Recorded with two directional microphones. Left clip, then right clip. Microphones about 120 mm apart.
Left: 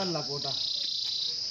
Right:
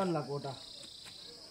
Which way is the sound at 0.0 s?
25° right (ahead or behind).